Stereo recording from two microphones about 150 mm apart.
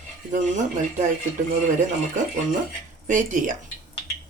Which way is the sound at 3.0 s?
60° right (ahead or behind).